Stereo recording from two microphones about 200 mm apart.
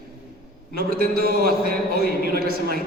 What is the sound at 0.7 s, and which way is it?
A man's voice, 50° right (ahead or behind).